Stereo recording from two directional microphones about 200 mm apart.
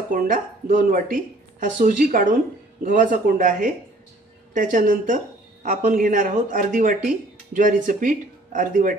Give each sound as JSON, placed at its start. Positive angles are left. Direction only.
{"t": 0.1, "sound": "a woman's voice", "side_deg": -40}